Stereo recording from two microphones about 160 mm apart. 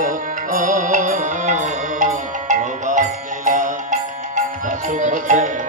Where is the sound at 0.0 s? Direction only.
55° right (ahead or behind).